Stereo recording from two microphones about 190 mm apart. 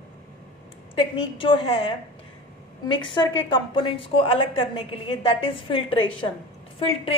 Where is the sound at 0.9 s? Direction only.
25° left (ahead or behind).